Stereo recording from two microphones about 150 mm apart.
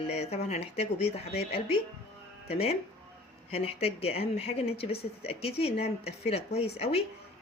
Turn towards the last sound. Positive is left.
turn(degrees=40)  # may be behind; listen again after turning